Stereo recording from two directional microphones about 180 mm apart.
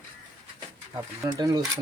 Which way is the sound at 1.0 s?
20° right (ahead or behind).